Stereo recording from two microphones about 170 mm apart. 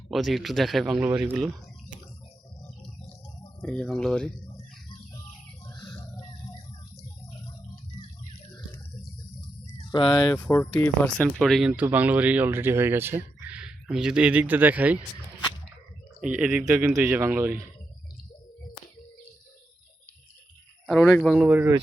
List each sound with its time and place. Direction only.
0.1 s a man's voice: centre (ahead or behind)
3.6 s a man's voice: 5° left (ahead or behind)
5.6 s a sound: 25° left (ahead or behind)
9.9 s speech: 25° left (ahead or behind)
10.2 s speech: 10° left (ahead or behind); by 14.9 s 10° right (ahead or behind)
16.3 s speech: 5° right (ahead or behind)
20.8 s speech: centre (ahead or behind)